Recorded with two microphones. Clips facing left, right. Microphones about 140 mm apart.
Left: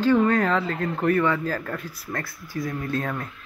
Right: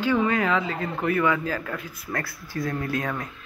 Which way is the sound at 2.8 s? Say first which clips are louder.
Left 1 dB; 30° left (ahead or behind).